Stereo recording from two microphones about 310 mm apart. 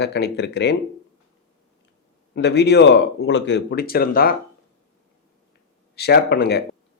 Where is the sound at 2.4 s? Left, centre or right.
Left.